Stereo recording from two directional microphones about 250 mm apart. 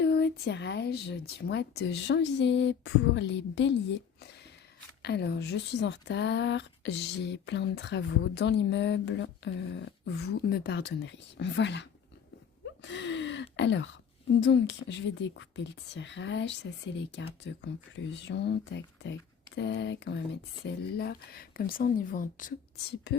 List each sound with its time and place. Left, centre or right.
0.0 s speech: left
5.0 s speech: left
12.8 s a sound: left
14.4 s speech: left